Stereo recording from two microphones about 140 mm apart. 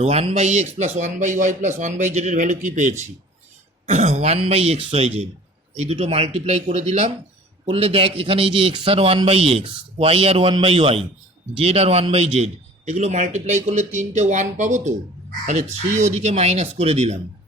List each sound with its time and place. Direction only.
0.0 s a man's voice: 45° right (ahead or behind)